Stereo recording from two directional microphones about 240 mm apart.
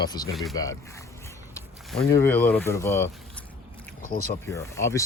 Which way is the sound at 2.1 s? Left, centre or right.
Centre.